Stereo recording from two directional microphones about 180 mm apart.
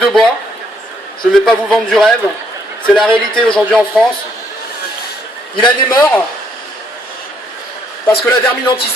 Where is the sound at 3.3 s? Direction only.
5° left (ahead or behind).